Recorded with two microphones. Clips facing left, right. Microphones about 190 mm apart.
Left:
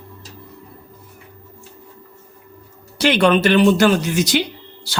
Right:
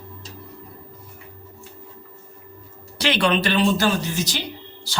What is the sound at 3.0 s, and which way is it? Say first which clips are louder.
Speech: left 6 dB; 50° left (ahead or behind).